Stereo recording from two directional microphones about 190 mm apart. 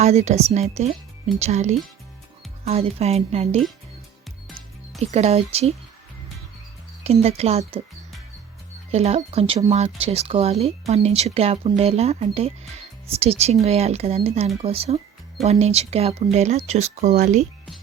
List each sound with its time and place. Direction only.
0.0 s speech: 35° right (ahead or behind)
4.9 s speech: 35° right (ahead or behind)
7.0 s speech: 35° right (ahead or behind)
8.9 s speech: 35° right (ahead or behind)